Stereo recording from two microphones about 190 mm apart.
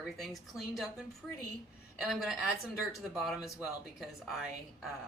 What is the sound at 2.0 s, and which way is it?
Speech, centre (ahead or behind).